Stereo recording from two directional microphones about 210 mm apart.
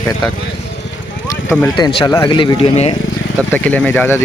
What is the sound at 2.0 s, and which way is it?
Speech, 20° left (ahead or behind).